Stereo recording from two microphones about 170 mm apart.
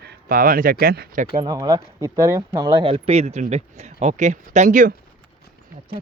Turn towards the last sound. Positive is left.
turn(degrees=-50)  # may be behind; listen again after turning